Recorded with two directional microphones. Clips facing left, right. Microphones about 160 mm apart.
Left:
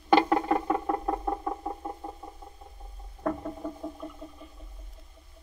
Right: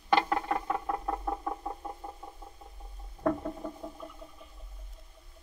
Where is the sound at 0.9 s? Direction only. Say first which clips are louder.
Left 4 dB; 5° left (ahead or behind).